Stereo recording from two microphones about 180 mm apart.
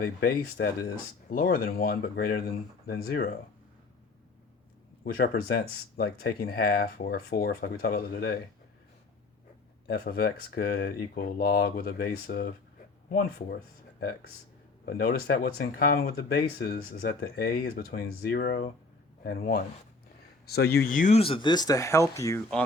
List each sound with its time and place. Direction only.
0.0 s speech: 55° left (ahead or behind)
5.0 s speech: 60° left (ahead or behind)
9.8 s speech: 55° left (ahead or behind)
14.8 s speech: 55° left (ahead or behind)
21.2 s speech: 30° left (ahead or behind)